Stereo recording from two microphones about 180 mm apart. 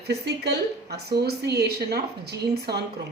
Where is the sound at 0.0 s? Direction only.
65° right (ahead or behind).